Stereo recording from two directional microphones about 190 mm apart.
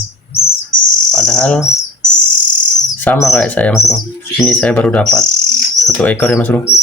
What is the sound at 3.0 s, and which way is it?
Speech, 5° left (ahead or behind).